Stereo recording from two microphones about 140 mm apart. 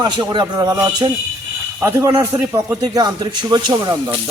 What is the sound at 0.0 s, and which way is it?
Speech, 30° right (ahead or behind).